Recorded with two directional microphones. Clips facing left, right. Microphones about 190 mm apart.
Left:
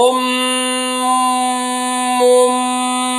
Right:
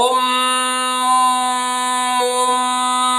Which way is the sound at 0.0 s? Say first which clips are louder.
Left 5 dB; 25° left (ahead or behind).